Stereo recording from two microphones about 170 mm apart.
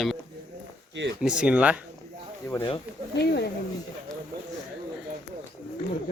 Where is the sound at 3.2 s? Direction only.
75° left (ahead or behind).